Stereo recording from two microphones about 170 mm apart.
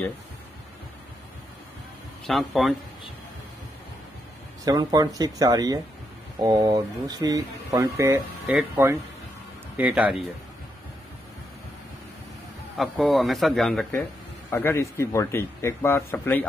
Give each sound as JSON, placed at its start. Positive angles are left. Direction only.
{"t": 2.2, "sound": "speech", "side_deg": 0}
{"t": 4.6, "sound": "speech", "side_deg": -20}
{"t": 12.7, "sound": "speech", "side_deg": 0}
{"t": 14.5, "sound": "a man's voice", "side_deg": 15}